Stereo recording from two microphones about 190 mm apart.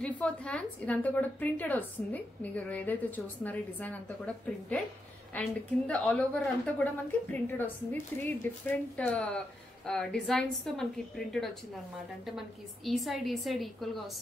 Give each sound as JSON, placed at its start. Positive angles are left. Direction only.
{"t": 0.0, "sound": "a woman's voice", "side_deg": 5}
{"t": 5.3, "sound": "a woman's voice", "side_deg": 5}